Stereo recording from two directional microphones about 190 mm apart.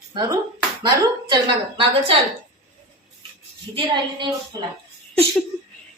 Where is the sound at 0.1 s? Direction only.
20° right (ahead or behind).